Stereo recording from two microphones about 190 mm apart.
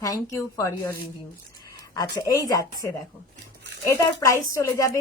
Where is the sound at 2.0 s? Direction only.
20° left (ahead or behind).